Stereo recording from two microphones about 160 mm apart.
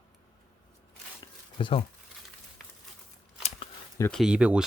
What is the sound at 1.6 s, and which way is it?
Speech, 30° left (ahead or behind).